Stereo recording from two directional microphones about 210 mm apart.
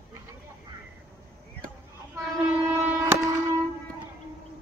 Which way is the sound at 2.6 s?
10° right (ahead or behind).